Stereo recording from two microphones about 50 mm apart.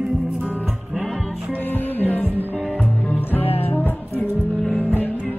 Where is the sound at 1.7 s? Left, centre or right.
Left.